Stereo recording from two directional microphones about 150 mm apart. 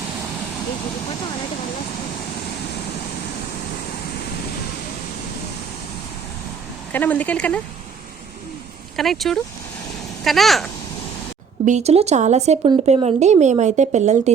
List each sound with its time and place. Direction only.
6.9 s speech: 10° left (ahead or behind)
9.0 s speech: centre (ahead or behind)
11.6 s speech: 50° right (ahead or behind)